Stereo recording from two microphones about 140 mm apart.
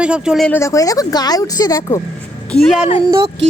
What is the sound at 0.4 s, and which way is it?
Speech, 15° left (ahead or behind).